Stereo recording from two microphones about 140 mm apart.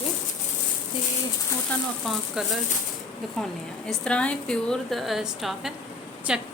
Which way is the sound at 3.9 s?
5° left (ahead or behind).